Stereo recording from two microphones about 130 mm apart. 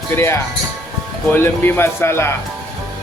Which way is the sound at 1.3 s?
15° left (ahead or behind).